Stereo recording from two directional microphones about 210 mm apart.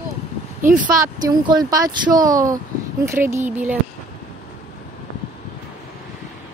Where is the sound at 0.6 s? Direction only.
15° right (ahead or behind).